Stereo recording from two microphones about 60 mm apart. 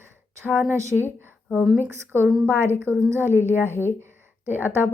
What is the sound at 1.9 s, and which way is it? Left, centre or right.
A woman's voice, right.